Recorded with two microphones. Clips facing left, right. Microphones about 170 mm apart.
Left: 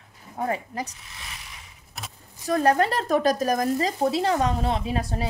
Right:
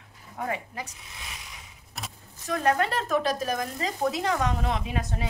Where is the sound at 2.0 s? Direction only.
Centre (ahead or behind).